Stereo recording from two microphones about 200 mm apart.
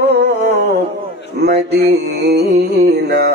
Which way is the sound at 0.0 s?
55° right (ahead or behind).